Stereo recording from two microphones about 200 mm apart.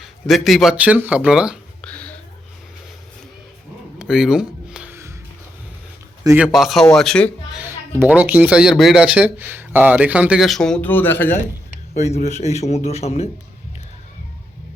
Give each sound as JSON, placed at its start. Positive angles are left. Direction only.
{"t": 0.0, "sound": "speech", "side_deg": 0}
{"t": 1.9, "sound": "whispering", "side_deg": 5}
{"t": 3.9, "sound": "a sound", "side_deg": -5}
{"t": 6.2, "sound": "speech", "side_deg": -5}
{"t": 7.6, "sound": "speech", "side_deg": -10}
{"t": 11.9, "sound": "a man's voice", "side_deg": 35}